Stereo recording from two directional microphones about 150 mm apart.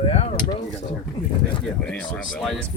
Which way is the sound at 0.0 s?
45° left (ahead or behind).